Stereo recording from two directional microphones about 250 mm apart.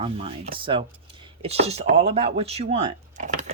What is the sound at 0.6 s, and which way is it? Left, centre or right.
Speech, centre.